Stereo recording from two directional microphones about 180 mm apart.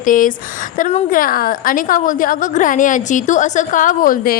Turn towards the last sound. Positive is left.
turn(degrees=55)  # may be behind; listen again after turning